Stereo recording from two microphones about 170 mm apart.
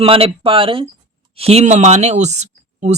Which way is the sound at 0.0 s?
30° right (ahead or behind).